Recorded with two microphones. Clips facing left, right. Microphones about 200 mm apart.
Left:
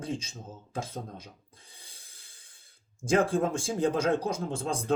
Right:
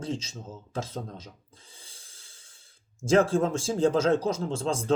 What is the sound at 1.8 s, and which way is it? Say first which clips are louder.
Snort: right 2 dB; 60° left (ahead or behind).